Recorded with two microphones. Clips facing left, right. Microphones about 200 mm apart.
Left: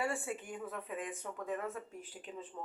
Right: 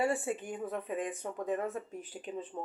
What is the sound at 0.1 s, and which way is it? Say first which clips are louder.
Speech: right 6 dB; 35° right (ahead or behind).